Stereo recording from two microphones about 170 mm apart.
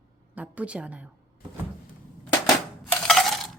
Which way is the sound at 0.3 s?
10° right (ahead or behind).